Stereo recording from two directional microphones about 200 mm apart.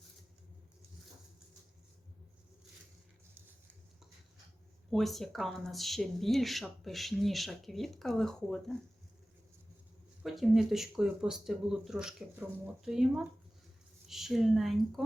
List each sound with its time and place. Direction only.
4.9 s speech: centre (ahead or behind)
10.2 s speech: centre (ahead or behind)